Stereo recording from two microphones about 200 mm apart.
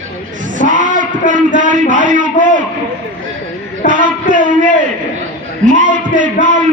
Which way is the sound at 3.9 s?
40° right (ahead or behind).